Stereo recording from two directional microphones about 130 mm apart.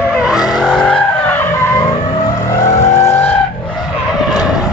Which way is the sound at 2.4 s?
25° left (ahead or behind).